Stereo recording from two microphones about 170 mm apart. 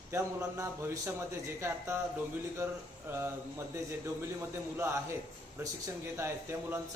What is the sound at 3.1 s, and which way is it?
Speech, 15° right (ahead or behind).